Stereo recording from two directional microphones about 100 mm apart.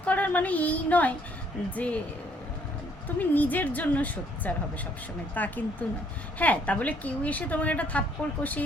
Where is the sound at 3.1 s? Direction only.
15° left (ahead or behind).